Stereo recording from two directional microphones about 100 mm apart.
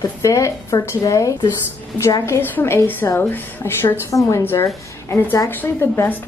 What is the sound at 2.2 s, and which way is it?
A woman's voice, 20° left (ahead or behind).